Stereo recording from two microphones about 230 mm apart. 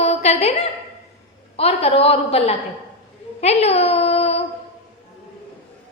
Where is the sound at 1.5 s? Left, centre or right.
Left.